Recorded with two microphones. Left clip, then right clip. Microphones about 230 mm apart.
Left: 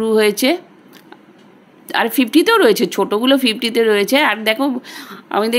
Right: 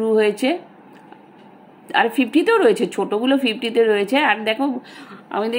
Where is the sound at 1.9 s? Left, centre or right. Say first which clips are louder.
Left 2 dB; left.